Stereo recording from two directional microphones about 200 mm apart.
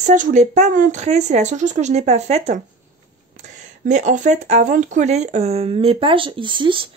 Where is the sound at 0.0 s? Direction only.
40° right (ahead or behind).